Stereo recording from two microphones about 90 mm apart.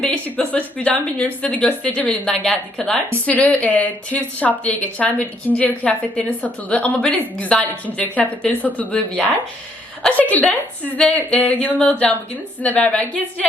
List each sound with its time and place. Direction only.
0.0 s speech: 15° left (ahead or behind)